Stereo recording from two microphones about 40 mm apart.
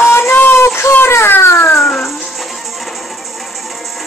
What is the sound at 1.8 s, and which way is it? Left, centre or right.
Music, centre.